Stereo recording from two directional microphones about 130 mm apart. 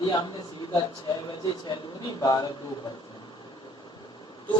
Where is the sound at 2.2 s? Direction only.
30° left (ahead or behind).